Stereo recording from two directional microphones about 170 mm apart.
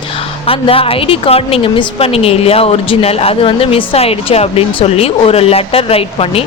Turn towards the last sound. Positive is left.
turn(degrees=35)  # may be behind; listen again after turning